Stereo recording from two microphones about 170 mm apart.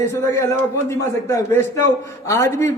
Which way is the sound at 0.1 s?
15° left (ahead or behind).